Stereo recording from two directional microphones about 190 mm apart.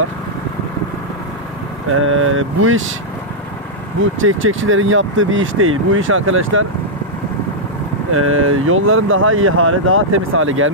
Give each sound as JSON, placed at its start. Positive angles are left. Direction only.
{"t": 1.9, "sound": "speech", "side_deg": -90}
{"t": 4.0, "sound": "speech", "side_deg": -90}
{"t": 8.1, "sound": "speech", "side_deg": -90}